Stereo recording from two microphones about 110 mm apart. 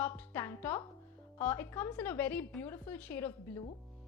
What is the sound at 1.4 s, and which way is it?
A woman's voice, 20° left (ahead or behind).